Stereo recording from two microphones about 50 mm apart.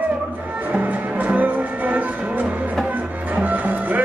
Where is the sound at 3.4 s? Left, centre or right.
Right.